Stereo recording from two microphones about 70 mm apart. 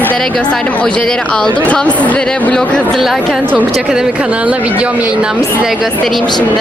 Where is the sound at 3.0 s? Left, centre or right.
Centre.